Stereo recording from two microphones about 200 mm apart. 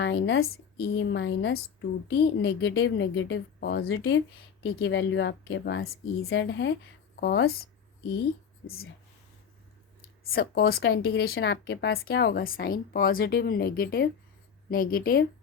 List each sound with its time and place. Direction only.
0.0 s a woman's voice: 65° left (ahead or behind)
3.8 s speech: 80° left
4.6 s a woman's voice: 65° left (ahead or behind)
8.6 s speech: 90° left
10.2 s a woman's voice: 50° left (ahead or behind)
11.3 s speech: 65° left (ahead or behind); by 15.3 s 50° left (ahead or behind)